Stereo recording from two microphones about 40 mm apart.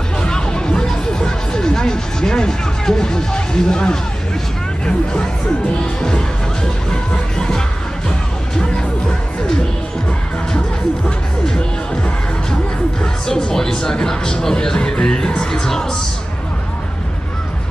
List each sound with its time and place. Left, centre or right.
0.2 s music: centre
11.4 s music: left
13.0 s speech: centre